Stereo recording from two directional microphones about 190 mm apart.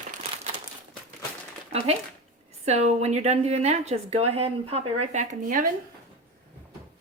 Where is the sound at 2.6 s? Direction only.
35° right (ahead or behind).